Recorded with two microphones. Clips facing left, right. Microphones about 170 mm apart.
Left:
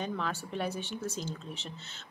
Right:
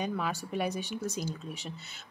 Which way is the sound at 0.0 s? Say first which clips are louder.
Right 2 dB; 10° right (ahead or behind).